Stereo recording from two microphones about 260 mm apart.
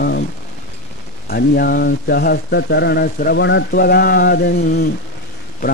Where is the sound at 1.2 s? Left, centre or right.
Left.